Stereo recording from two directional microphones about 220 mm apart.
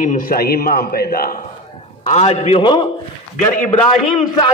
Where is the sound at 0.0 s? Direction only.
40° left (ahead or behind).